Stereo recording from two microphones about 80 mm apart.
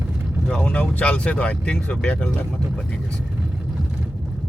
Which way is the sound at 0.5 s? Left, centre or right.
Centre.